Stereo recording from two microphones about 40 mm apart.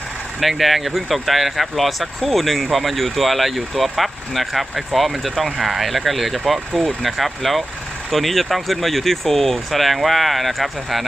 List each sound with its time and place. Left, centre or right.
0.3 s speech: centre